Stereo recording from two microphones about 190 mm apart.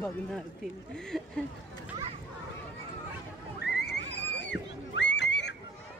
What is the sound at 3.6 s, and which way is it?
Neigh, 60° left (ahead or behind).